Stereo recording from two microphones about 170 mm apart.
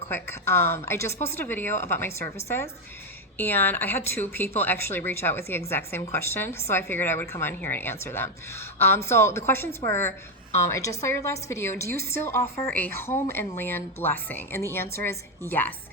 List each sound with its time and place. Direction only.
0.1 s speech: 15° left (ahead or behind)